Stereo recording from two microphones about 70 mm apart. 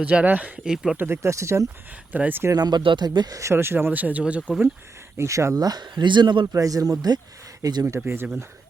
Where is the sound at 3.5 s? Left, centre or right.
Right; by 4.5 s centre.